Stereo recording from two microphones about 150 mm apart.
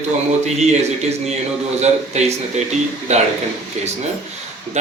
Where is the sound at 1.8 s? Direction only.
50° right (ahead or behind).